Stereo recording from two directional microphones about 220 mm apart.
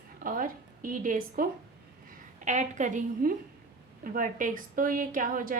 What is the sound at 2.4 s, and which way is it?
A woman's voice, 35° right (ahead or behind).